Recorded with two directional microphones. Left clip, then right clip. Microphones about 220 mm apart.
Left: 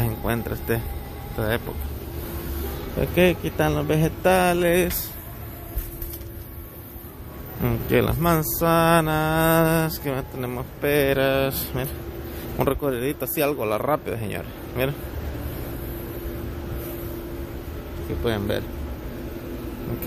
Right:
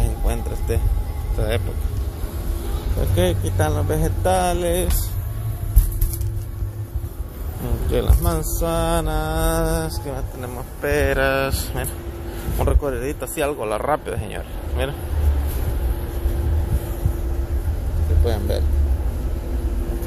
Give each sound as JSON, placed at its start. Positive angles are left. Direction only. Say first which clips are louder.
{"t": 0.2, "sound": "music", "louder": "left 2 dB", "side_deg": 35}
{"t": 3.2, "sound": "speech", "louder": "left 2 dB", "side_deg": 40}
{"t": 7.6, "sound": "speech", "louder": "left 2 dB", "side_deg": 45}
{"t": 18.2, "sound": "speech", "louder": "even", "side_deg": 35}